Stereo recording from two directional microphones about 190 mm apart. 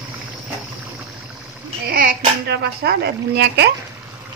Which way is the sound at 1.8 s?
50° right (ahead or behind).